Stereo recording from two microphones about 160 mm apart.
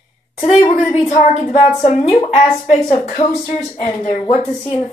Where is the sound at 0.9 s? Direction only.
50° left (ahead or behind).